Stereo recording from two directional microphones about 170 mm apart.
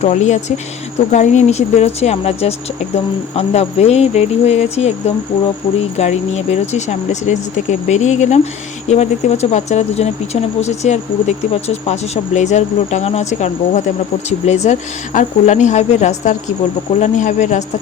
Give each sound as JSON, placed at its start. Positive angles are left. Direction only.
{"t": 0.0, "sound": "speech", "side_deg": 40}
{"t": 6.0, "sound": "speech", "side_deg": 40}